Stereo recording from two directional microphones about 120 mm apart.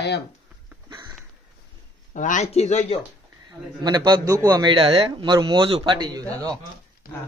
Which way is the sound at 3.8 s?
35° right (ahead or behind).